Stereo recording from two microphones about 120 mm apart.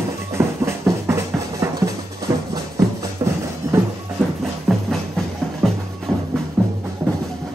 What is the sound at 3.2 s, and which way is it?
Music, 35° right (ahead or behind).